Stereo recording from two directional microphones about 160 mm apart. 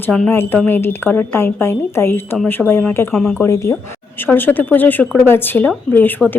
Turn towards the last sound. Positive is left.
turn(degrees=10)  # may be behind; listen again after turning